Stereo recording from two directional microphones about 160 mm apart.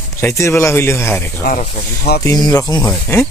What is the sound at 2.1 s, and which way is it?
Speech, 90° left.